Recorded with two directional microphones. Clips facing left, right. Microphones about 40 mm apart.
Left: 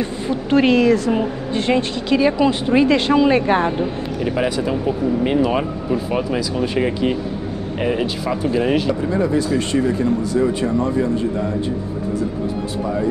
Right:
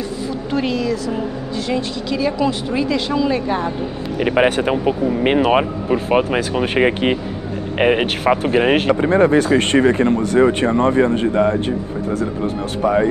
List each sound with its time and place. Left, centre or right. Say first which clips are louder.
0.0 s speech: left 2 dB; left
4.2 s speech: right 5 dB; right
12.8 s speech: right 7 dB; right